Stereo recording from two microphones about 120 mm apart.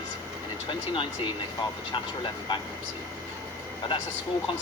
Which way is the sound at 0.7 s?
45° left (ahead or behind).